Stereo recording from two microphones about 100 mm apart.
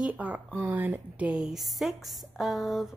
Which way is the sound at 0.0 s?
15° right (ahead or behind).